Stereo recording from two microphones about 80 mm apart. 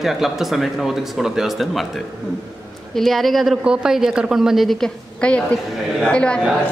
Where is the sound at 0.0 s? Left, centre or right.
Centre.